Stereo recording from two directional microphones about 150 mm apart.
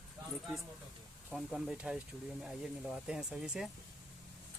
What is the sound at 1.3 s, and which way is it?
Speech, 5° right (ahead or behind).